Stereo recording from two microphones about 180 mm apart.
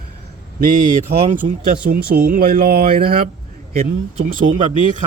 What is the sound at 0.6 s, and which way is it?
Speech, 45° right (ahead or behind).